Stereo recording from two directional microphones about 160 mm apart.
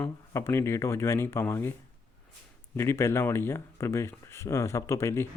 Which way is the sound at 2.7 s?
15° left (ahead or behind).